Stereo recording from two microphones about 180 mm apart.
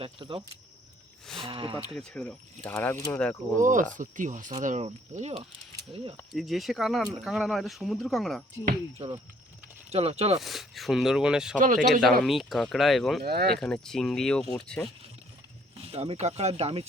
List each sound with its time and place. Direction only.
0.0 s speech: 30° right (ahead or behind)
1.5 s speech: 30° right (ahead or behind)
2.0 s speech: 5° left (ahead or behind)
3.6 s speech: 45° right (ahead or behind)
6.3 s speech: centre (ahead or behind)
9.0 s speech: 30° right (ahead or behind)
10.4 s speech: centre (ahead or behind)
11.6 s speech: 45° right (ahead or behind)
11.9 s speech: centre (ahead or behind)
13.2 s speech: 60° right (ahead or behind)
13.6 s speech: 5° left (ahead or behind)
15.8 s speech: 35° right (ahead or behind)